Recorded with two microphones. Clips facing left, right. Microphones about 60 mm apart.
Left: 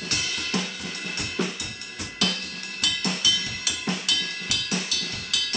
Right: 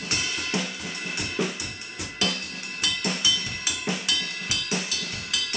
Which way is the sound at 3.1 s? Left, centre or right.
Right.